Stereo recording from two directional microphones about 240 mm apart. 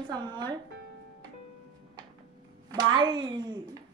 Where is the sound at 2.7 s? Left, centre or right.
Centre.